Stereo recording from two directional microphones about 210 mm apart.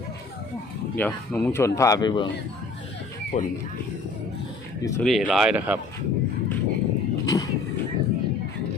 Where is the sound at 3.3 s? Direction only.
35° left (ahead or behind).